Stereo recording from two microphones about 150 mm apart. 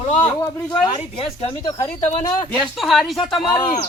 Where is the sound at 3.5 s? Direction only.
30° left (ahead or behind).